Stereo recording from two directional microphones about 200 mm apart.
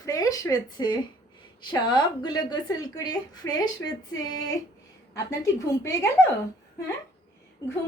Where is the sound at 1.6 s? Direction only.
20° left (ahead or behind).